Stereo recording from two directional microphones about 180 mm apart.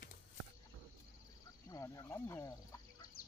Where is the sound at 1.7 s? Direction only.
20° left (ahead or behind).